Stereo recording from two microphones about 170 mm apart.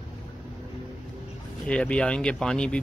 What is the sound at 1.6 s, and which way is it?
Speech, 5° left (ahead or behind).